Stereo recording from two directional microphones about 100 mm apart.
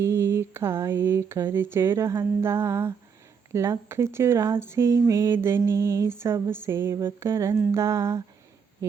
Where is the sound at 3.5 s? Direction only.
25° right (ahead or behind).